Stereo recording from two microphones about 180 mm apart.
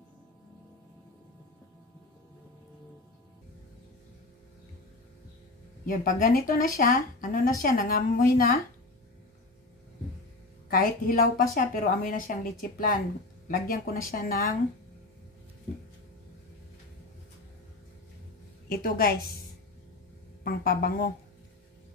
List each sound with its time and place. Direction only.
6.0 s a woman's voice: 50° left (ahead or behind)
10.7 s a woman's voice: 55° left (ahead or behind)
18.7 s a woman's voice: 55° left (ahead or behind)
20.4 s a woman's voice: 55° left (ahead or behind)